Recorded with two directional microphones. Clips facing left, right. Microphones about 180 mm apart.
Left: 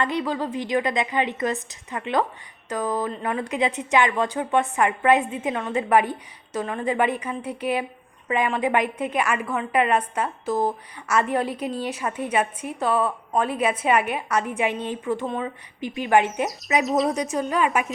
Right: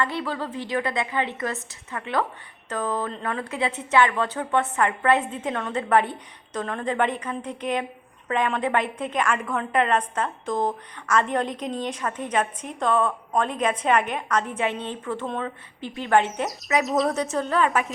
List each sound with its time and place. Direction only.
0.0 s a woman's voice: 15° left (ahead or behind)
16.8 s speech: centre (ahead or behind)
17.2 s a woman's voice: 15° left (ahead or behind)